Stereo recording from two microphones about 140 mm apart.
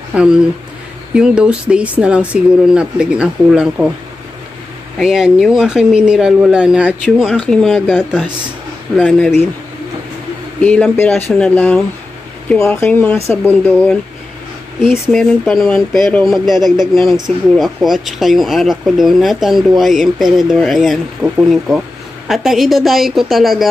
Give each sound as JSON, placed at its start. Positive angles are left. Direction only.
{"t": 0.1, "sound": "speech", "side_deg": -5}
{"t": 4.9, "sound": "speech", "side_deg": -5}
{"t": 7.3, "sound": "speech", "side_deg": 5}
{"t": 10.6, "sound": "speech", "side_deg": 10}
{"t": 12.5, "sound": "speech", "side_deg": 20}
{"t": 14.8, "sound": "speech", "side_deg": 0}